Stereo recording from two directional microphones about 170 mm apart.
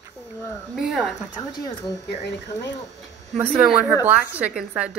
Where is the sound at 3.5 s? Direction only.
10° right (ahead or behind).